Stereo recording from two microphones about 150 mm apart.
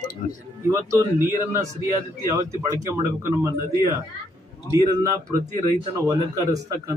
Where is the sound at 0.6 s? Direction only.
20° right (ahead or behind).